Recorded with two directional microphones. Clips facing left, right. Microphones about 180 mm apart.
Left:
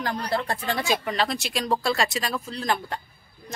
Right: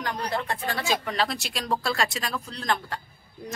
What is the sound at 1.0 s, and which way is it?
A woman's voice, centre (ahead or behind).